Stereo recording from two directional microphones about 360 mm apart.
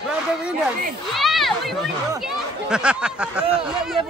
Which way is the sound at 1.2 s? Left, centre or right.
Centre.